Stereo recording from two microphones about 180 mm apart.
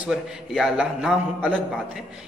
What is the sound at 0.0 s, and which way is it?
A man's voice, centre (ahead or behind).